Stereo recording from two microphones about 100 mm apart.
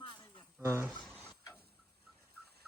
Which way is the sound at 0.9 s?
10° left (ahead or behind).